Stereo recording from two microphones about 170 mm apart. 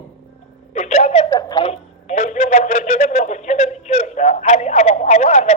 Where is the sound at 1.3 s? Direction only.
20° left (ahead or behind).